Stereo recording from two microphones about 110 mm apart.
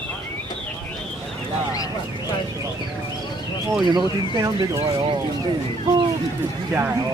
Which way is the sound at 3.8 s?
35° right (ahead or behind).